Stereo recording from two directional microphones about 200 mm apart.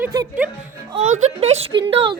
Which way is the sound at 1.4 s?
30° right (ahead or behind).